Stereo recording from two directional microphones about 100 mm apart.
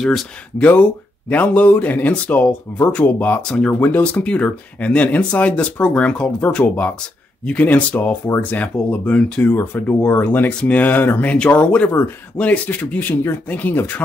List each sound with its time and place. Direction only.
0.0 s speech: centre (ahead or behind)
0.7 s speech: 15° left (ahead or behind)